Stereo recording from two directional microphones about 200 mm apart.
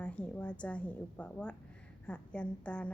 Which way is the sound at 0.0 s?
5° left (ahead or behind).